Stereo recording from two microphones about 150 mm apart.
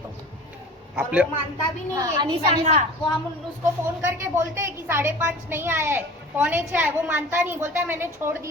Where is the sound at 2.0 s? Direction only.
30° right (ahead or behind).